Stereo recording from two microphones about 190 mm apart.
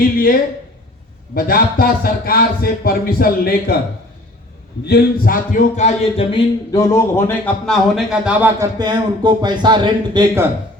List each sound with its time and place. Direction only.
1.4 s speech: 50° left (ahead or behind)
4.9 s speech: 50° left (ahead or behind); by 8.6 s 10° right (ahead or behind)
8.8 s speech: 20° right (ahead or behind)